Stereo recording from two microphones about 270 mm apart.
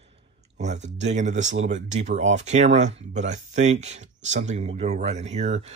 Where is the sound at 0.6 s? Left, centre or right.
Right.